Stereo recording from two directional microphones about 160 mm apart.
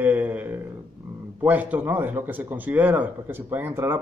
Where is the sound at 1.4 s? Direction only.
10° right (ahead or behind).